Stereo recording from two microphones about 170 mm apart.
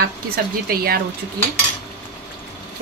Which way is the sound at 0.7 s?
65° right (ahead or behind).